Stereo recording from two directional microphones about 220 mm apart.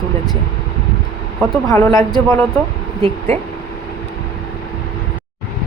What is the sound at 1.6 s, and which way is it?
Speech, 15° left (ahead or behind).